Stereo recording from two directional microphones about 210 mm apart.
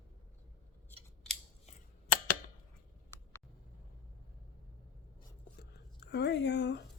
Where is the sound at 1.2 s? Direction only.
5° left (ahead or behind).